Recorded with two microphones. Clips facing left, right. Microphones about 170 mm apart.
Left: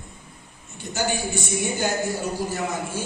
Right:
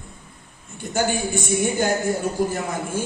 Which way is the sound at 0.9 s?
50° right (ahead or behind).